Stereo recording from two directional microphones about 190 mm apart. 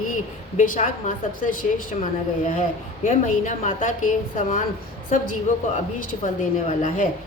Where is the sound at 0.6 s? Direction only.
45° left (ahead or behind).